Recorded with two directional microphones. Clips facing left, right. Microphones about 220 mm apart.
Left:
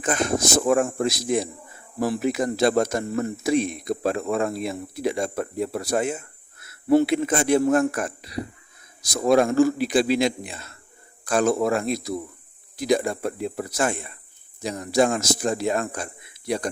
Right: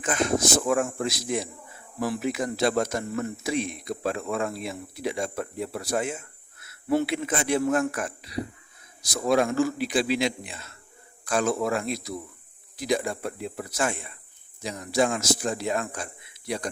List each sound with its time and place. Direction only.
0.0 s a man's voice: 45° left (ahead or behind)